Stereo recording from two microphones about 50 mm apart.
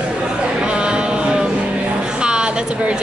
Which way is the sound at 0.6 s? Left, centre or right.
Centre.